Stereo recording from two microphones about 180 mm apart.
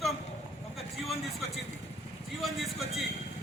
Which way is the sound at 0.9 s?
Centre (ahead or behind).